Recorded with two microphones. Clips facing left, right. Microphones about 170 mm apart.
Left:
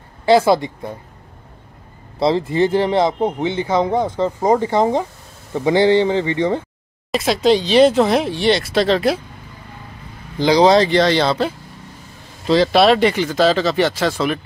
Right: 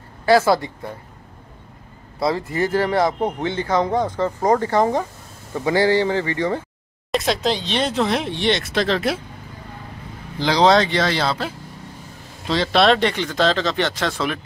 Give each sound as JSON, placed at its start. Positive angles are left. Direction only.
{"t": 0.2, "sound": "speech", "side_deg": 20}
{"t": 2.1, "sound": "speech", "side_deg": 25}
{"t": 7.1, "sound": "speech", "side_deg": 0}
{"t": 10.4, "sound": "speech", "side_deg": 0}